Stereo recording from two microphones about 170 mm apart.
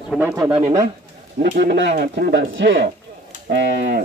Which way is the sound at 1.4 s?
85° right.